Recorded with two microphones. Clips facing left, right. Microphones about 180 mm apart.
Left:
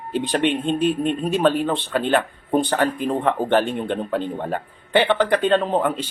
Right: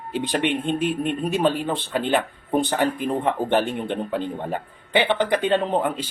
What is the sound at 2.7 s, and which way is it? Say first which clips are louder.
A man's voice: left 1 dB; 15° right (ahead or behind).